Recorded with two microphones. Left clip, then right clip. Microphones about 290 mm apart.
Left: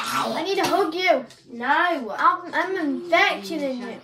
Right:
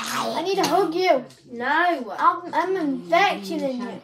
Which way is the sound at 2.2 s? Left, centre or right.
Centre.